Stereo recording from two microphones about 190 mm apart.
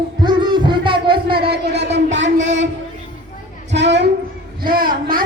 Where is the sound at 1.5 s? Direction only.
60° right (ahead or behind).